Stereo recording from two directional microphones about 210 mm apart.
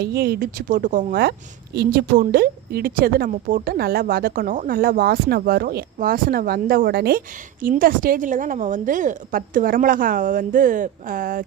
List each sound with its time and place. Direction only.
0.0 s a woman's voice: 50° right (ahead or behind)